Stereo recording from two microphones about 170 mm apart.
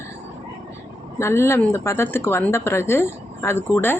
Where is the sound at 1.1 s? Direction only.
15° left (ahead or behind).